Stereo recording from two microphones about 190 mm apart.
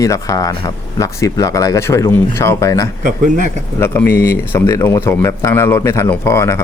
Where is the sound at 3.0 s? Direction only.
45° right (ahead or behind).